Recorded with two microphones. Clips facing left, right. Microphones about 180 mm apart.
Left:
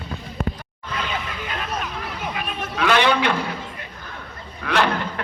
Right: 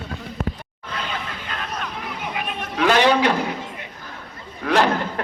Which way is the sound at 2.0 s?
20° right (ahead or behind).